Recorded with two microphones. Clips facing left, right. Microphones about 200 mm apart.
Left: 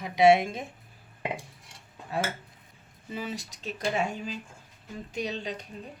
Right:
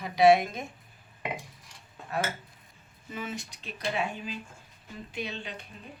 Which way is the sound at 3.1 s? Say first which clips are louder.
Left 2 dB; 35° left (ahead or behind).